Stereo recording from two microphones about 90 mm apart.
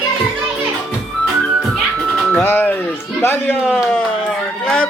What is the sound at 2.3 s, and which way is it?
Music, 25° left (ahead or behind).